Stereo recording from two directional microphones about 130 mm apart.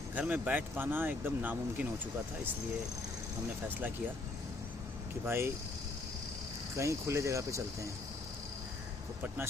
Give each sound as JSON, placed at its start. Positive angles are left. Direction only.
{"t": 0.1, "sound": "speech", "side_deg": -10}
{"t": 5.2, "sound": "speech", "side_deg": -15}
{"t": 6.7, "sound": "speech", "side_deg": -20}